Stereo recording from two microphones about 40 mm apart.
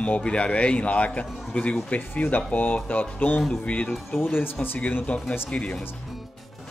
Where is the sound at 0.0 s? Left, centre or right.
Left.